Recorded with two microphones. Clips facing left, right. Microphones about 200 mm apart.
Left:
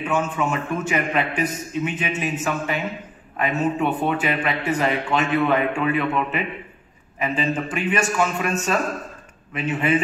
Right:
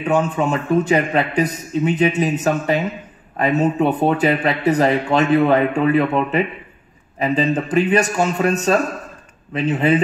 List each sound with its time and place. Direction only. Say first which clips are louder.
0.1 s speech: right 6 dB; 35° right (ahead or behind)